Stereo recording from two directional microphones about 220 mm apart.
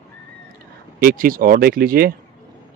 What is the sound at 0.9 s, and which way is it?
Speech, 40° right (ahead or behind).